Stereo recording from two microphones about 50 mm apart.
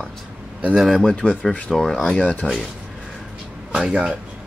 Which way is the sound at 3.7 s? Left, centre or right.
Centre.